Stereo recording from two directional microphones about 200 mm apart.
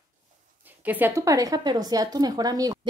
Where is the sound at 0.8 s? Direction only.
10° right (ahead or behind).